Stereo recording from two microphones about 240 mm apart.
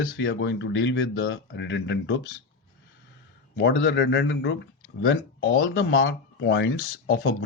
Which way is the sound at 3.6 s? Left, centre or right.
Left.